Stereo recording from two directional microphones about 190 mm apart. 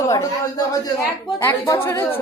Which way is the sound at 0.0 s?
15° left (ahead or behind).